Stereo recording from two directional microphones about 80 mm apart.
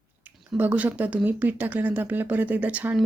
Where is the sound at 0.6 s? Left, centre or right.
Right.